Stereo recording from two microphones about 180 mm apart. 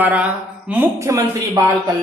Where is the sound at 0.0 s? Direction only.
10° right (ahead or behind).